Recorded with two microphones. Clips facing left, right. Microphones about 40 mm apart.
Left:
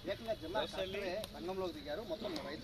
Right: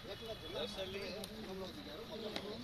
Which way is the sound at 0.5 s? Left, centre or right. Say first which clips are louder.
Left 2 dB; left.